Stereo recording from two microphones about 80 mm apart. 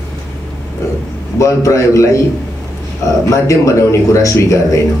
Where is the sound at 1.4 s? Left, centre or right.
Left.